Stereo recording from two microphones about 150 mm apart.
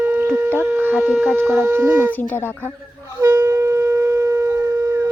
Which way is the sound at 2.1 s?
10° left (ahead or behind).